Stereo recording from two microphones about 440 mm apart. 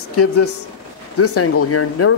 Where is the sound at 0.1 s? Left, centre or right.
Left.